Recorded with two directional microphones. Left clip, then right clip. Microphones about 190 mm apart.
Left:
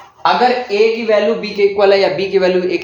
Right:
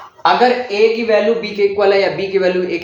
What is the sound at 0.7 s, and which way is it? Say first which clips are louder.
A man's voice: even; 20° left (ahead or behind).